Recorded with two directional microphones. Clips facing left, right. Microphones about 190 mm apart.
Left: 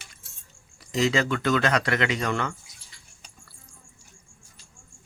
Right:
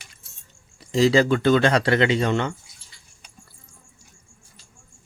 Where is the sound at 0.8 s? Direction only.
30° right (ahead or behind).